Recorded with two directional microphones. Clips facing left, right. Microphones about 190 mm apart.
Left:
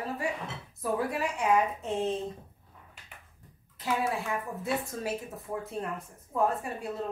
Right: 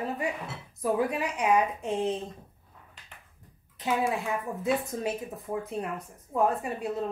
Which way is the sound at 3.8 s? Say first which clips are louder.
Right 2 dB; 15° right (ahead or behind).